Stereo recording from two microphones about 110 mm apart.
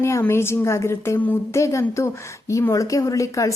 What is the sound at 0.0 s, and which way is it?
A woman's voice, 25° left (ahead or behind).